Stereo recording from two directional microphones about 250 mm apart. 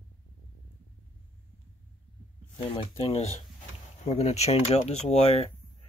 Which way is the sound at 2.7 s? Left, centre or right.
Left.